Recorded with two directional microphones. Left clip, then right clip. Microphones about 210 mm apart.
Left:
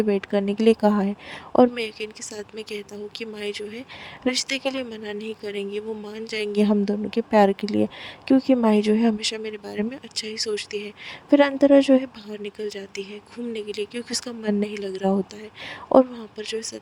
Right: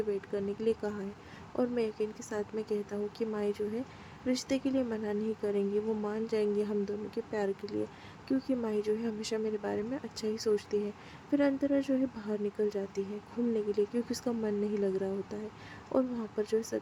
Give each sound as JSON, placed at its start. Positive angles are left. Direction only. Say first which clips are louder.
{"t": 0.1, "sound": "speech", "louder": "left 11 dB", "side_deg": 40}